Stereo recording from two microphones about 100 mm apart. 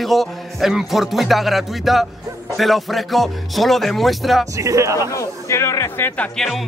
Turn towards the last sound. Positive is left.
turn(degrees=20)  # may be behind; listen again after turning